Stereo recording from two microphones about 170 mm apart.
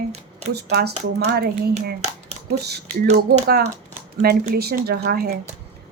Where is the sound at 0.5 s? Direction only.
70° right (ahead or behind).